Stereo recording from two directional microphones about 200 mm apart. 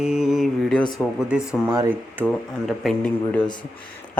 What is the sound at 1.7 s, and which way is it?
Mantra, 20° right (ahead or behind).